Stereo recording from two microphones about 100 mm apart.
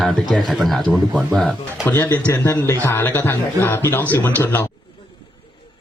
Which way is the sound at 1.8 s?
20° left (ahead or behind).